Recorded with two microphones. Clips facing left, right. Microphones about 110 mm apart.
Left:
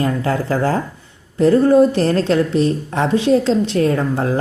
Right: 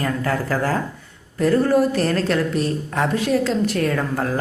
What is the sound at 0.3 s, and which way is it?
A woman's voice, 30° left (ahead or behind).